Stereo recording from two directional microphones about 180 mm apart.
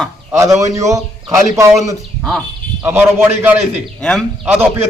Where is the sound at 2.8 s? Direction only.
10° right (ahead or behind).